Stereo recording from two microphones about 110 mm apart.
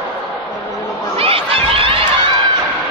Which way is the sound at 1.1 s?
60° right (ahead or behind).